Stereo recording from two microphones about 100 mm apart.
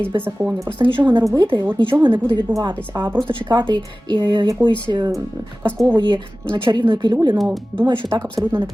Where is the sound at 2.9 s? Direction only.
35° right (ahead or behind).